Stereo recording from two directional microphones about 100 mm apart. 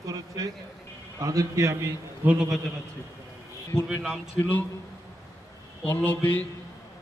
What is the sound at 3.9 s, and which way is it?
Speech, 5° right (ahead or behind).